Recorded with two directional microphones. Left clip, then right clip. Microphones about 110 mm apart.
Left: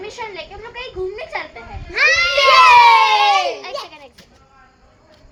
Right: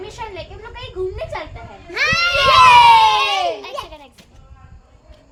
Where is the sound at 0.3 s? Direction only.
25° right (ahead or behind).